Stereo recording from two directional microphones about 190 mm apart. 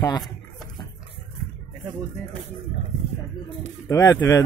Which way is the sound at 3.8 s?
15° left (ahead or behind).